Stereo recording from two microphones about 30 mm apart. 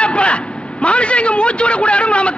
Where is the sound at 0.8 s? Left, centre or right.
Left.